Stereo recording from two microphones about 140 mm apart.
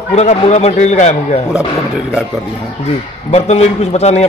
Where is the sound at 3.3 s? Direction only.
50° left (ahead or behind).